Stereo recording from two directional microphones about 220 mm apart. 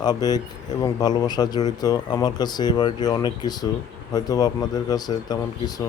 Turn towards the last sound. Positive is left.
turn(degrees=20)  # may be behind; listen again after turning